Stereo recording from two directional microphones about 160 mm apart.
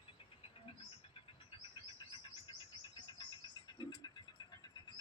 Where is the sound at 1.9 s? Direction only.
30° left (ahead or behind).